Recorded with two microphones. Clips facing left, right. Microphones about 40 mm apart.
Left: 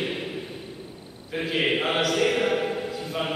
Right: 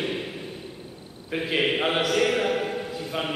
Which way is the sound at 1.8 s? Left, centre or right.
Centre.